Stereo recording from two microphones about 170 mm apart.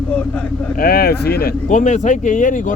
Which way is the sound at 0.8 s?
65° left (ahead or behind).